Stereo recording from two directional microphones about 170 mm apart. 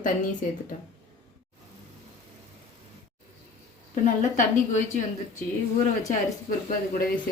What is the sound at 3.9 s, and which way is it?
Speech, 50° left (ahead or behind).